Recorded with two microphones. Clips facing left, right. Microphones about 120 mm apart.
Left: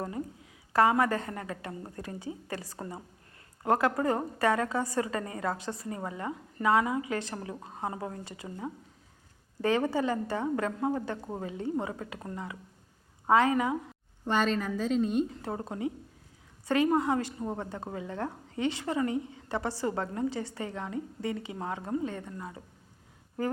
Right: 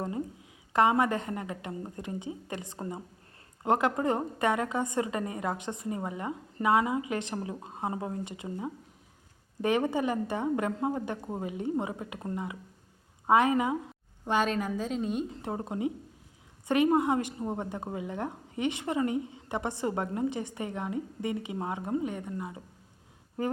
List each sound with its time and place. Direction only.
0.7 s a woman's voice: 20° right (ahead or behind)
14.3 s a woman's voice: 10° right (ahead or behind)
15.4 s a woman's voice: 20° right (ahead or behind)